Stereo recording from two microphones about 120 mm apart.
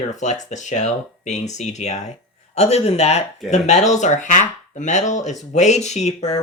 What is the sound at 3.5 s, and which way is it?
A man's voice, 75° left (ahead or behind).